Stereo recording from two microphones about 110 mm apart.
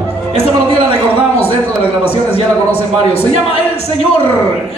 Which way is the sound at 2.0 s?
65° left (ahead or behind).